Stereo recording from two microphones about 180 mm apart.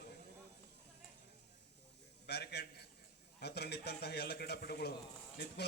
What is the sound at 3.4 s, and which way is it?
A man's voice, 65° left (ahead or behind).